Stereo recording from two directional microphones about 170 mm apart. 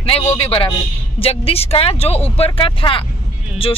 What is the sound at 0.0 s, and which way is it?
Speech, 35° left (ahead or behind).